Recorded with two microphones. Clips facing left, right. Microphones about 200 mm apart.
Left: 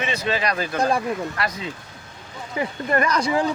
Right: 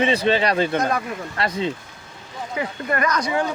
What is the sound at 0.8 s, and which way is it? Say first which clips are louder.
Speech: left 1 dB; 30° left (ahead or behind).